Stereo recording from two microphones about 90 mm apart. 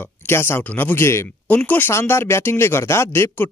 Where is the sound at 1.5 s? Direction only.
20° left (ahead or behind).